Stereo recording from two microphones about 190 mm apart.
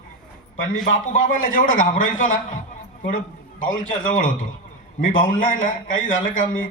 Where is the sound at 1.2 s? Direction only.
45° left (ahead or behind).